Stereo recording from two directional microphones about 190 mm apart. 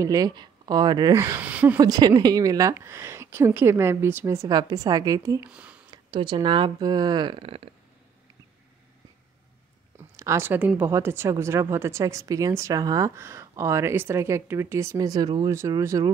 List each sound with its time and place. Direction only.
0.0 s speech: 20° right (ahead or behind)
1.8 s speech: 20° right (ahead or behind)
5.5 s a sound: 5° right (ahead or behind)
5.9 s speech: 25° right (ahead or behind)
10.1 s speech: 15° right (ahead or behind)